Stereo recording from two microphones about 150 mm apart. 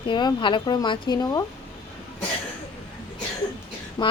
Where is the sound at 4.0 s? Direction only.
25° left (ahead or behind).